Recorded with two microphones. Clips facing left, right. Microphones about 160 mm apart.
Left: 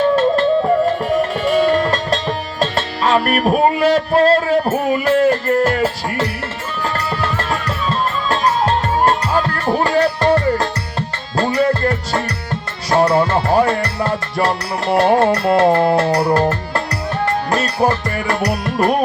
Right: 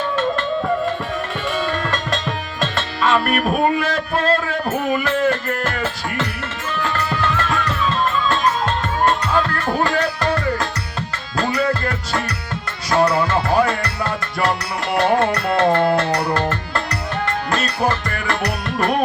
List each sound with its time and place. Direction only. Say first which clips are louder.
1.5 s music: left 8 dB; 35° left (ahead or behind)
3.3 s speech: left 3 dB; 35° left (ahead or behind)
6.8 s music: left 1 dB; 35° left (ahead or behind)
12.9 s music: left 3 dB; 30° left (ahead or behind)